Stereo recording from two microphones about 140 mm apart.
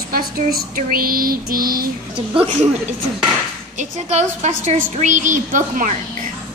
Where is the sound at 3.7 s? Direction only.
55° right (ahead or behind).